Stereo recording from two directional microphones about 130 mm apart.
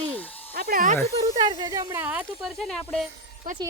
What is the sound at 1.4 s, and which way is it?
Speech, 35° right (ahead or behind).